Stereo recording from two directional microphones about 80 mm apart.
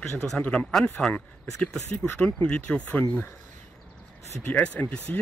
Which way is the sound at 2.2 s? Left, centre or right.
Centre.